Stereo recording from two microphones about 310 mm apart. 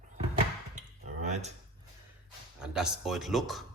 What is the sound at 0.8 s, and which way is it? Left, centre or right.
Cutlery, right.